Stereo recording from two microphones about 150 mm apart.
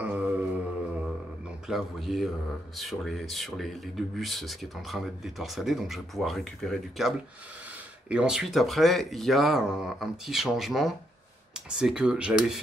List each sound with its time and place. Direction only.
0.0 s music: 10° right (ahead or behind)
1.7 s speech: centre (ahead or behind)